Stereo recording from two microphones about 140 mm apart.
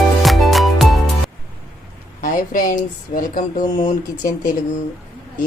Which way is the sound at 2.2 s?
70° left (ahead or behind).